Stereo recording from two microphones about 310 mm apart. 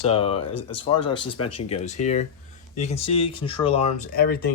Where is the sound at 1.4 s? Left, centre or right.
Left.